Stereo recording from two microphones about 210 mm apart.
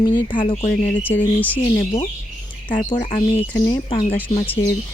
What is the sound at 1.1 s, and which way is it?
Speech, 10° left (ahead or behind).